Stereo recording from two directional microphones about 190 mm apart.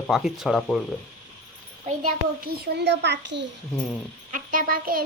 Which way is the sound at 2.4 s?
60° right (ahead or behind).